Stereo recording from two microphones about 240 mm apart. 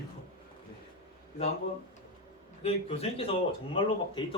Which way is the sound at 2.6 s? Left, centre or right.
Left.